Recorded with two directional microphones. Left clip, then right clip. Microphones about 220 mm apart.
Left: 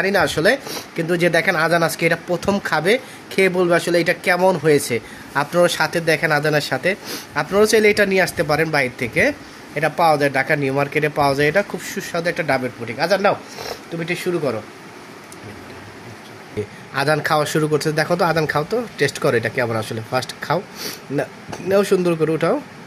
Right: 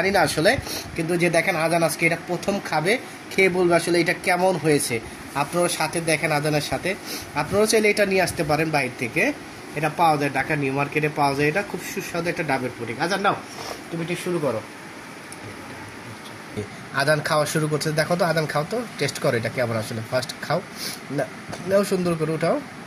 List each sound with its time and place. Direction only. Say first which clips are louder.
0.0 s speech: left 2 dB; 30° left (ahead or behind)
16.9 s speech: left 3 dB; 30° left (ahead or behind)